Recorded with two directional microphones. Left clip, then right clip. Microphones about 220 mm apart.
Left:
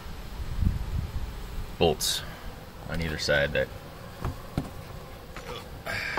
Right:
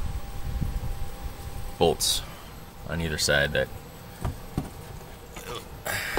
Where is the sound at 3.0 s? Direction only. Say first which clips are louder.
Right 2 dB; 30° right (ahead or behind).